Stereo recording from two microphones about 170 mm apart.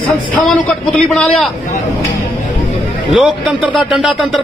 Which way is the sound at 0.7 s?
5° left (ahead or behind).